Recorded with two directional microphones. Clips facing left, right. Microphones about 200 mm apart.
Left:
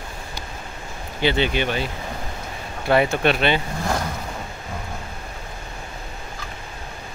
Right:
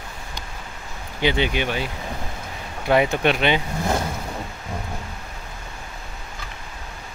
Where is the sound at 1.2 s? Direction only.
15° right (ahead or behind).